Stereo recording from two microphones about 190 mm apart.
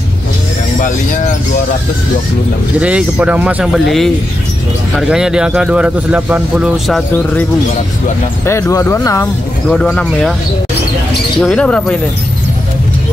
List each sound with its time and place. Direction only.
0.7 s speech: 40° left (ahead or behind)
2.8 s speech: 5° right (ahead or behind)
8.5 s speech: 15° left (ahead or behind)
9.7 s speech: 5° left (ahead or behind)
11.4 s speech: 5° left (ahead or behind)